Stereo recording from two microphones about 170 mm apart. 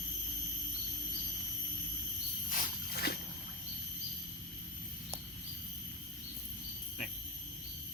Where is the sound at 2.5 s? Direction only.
60° left (ahead or behind).